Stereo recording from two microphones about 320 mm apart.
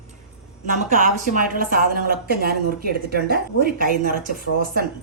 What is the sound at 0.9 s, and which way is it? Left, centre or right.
A woman's voice, right.